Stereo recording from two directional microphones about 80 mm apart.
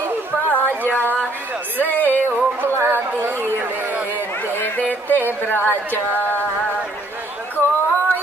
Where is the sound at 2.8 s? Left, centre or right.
Right.